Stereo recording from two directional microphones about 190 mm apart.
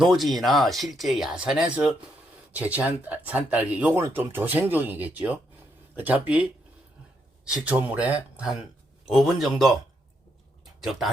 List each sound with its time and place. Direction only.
0.0 s speech: centre (ahead or behind)
10.8 s speech: centre (ahead or behind)